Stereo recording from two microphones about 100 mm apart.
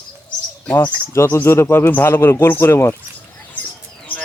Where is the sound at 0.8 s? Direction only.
25° left (ahead or behind).